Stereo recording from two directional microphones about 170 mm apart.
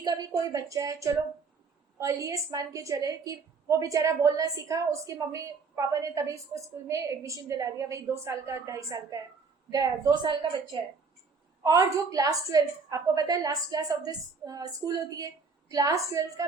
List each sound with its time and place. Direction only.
0.0 s a woman's voice: 20° right (ahead or behind)
15.7 s a woman's voice: 20° right (ahead or behind)